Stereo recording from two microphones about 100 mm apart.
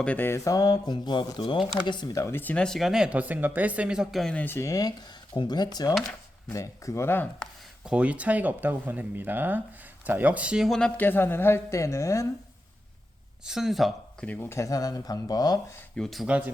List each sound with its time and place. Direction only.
0.0 s speech: 15° left (ahead or behind); by 1.5 s 50° left (ahead or behind)
1.5 s speech: 5° right (ahead or behind)
2.1 s a woman's voice: 25° left (ahead or behind)
2.6 s speech: centre (ahead or behind)
4.4 s a woman's voice: 20° left (ahead or behind); by 5.9 s 40° left (ahead or behind)
6.5 s a woman's voice: 30° left (ahead or behind)
7.9 s speech: 10° right (ahead or behind)
10.7 s speech: 10° left (ahead or behind)
11.0 s a woman's voice: 20° left (ahead or behind)
13.4 s speech: 5° right (ahead or behind)
14.5 s speech: 35° left (ahead or behind)
16.0 s speech: centre (ahead or behind)